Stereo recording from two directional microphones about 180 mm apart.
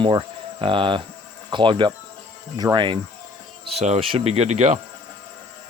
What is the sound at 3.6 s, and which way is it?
Speech, 35° right (ahead or behind).